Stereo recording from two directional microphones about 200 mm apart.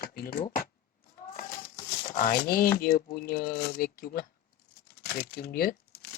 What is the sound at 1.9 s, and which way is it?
Speech, 40° left (ahead or behind).